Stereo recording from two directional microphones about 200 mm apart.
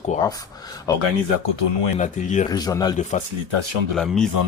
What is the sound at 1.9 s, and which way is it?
Speech, 35° left (ahead or behind).